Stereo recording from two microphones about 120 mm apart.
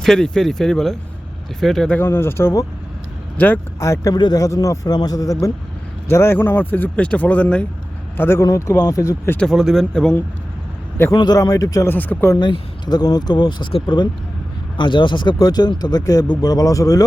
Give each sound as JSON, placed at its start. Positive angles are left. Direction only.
{"t": 0.0, "sound": "speech", "side_deg": 5}
{"t": 2.0, "sound": "speech", "side_deg": 20}
{"t": 3.8, "sound": "speech", "side_deg": 25}
{"t": 9.4, "sound": "speech", "side_deg": 0}
{"t": 11.1, "sound": "speech", "side_deg": 35}
{"t": 11.9, "sound": "speech", "side_deg": 15}
{"t": 12.4, "sound": "speech", "side_deg": 40}